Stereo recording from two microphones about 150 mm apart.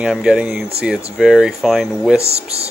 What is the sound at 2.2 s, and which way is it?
Speech, 45° right (ahead or behind).